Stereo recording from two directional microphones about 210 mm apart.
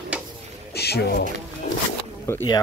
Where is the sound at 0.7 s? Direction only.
50° left (ahead or behind).